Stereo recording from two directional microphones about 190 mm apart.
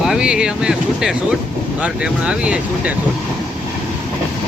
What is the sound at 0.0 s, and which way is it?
Speech, 5° right (ahead or behind).